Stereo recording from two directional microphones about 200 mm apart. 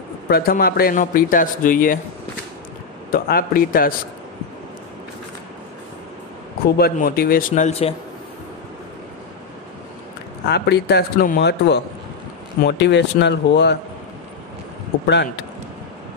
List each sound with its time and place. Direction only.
0.3 s speech: 50° left (ahead or behind)
3.1 s speech: 45° left (ahead or behind)
6.6 s speech: 50° left (ahead or behind); by 7.9 s 35° left (ahead or behind)
10.5 s speech: 55° left (ahead or behind)